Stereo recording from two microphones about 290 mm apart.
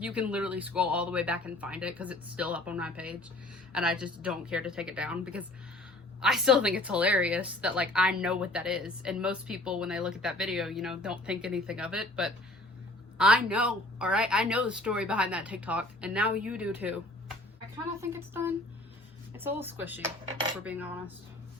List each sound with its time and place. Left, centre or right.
0.0 s a woman's voice: centre
18.0 s a woman's voice: centre